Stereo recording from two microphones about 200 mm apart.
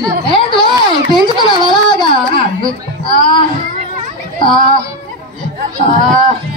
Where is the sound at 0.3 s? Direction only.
25° left (ahead or behind).